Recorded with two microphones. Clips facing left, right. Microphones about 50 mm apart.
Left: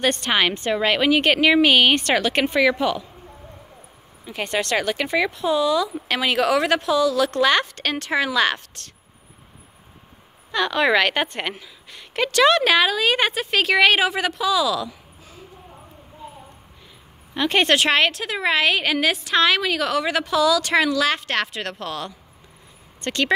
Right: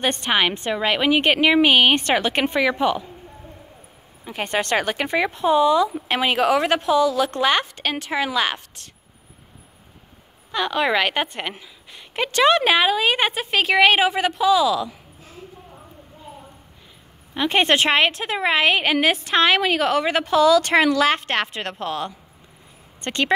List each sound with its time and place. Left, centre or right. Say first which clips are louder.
0.0 s speech: even; centre
4.2 s speech: right 1 dB; right
10.5 s a woman's voice: left 2 dB; centre
17.3 s speech: even; centre